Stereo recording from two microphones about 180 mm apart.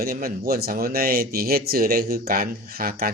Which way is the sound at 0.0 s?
55° right (ahead or behind).